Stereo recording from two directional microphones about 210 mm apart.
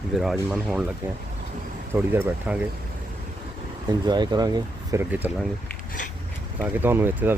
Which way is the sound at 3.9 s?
20° right (ahead or behind).